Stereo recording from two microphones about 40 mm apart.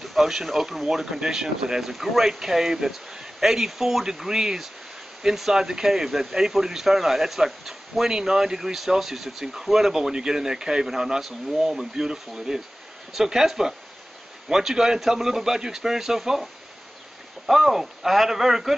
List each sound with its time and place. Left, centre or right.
0.0 s speech: centre
17.5 s speech: centre